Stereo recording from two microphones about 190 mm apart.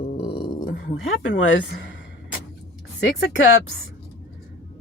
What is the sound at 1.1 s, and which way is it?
Speech, 80° left.